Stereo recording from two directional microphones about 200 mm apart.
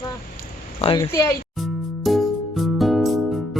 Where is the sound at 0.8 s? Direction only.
25° left (ahead or behind).